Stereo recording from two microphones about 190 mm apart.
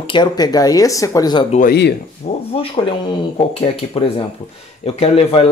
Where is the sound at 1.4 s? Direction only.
40° left (ahead or behind).